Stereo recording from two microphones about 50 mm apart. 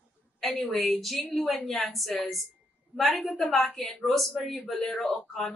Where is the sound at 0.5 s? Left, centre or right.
Left.